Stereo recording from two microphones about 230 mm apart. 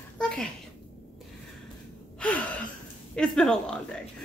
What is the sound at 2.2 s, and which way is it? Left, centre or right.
Gasp, centre.